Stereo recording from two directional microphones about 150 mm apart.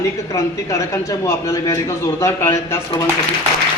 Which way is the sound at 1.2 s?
20° left (ahead or behind).